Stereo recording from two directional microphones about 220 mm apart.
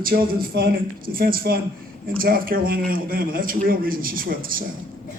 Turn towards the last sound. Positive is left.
turn(degrees=-40)  # may be behind; listen again after turning